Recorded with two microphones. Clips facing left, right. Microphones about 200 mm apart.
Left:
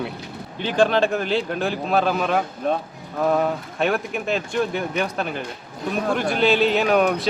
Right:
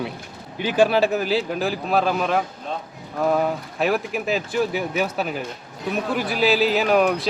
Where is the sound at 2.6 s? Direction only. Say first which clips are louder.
Left 7 dB; 55° left (ahead or behind).